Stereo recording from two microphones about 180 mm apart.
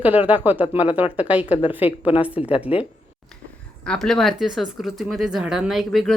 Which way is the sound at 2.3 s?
30° left (ahead or behind).